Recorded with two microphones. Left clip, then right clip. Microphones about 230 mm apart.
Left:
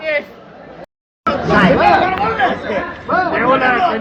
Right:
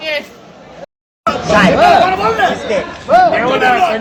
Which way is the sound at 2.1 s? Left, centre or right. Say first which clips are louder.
Right 3 dB; right.